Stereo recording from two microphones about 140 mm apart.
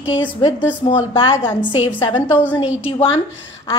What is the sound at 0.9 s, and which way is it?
A woman's voice, 35° left (ahead or behind).